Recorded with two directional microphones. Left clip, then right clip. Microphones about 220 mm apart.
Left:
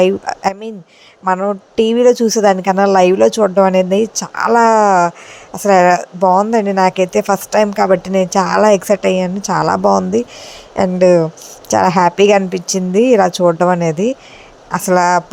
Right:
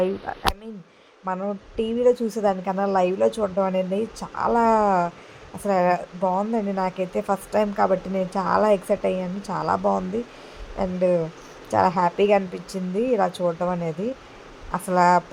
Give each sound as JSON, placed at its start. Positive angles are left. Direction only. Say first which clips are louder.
{"t": 1.2, "sound": "speech", "louder": "left 13 dB", "side_deg": 25}